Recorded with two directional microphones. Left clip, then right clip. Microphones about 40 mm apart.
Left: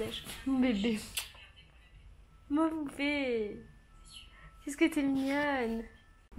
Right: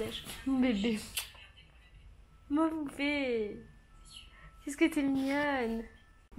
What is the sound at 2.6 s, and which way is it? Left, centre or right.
Speech, centre.